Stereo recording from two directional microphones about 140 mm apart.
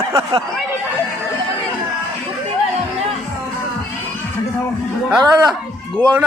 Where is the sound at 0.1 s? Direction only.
25° right (ahead or behind).